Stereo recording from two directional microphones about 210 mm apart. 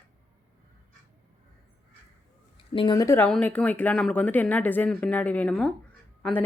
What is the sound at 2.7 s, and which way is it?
Speech, 20° left (ahead or behind).